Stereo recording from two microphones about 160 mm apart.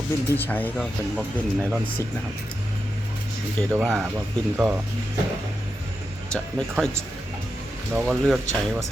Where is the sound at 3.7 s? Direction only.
15° right (ahead or behind).